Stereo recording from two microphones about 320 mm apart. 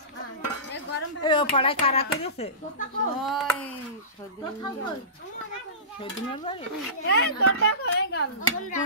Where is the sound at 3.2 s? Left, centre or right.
Centre.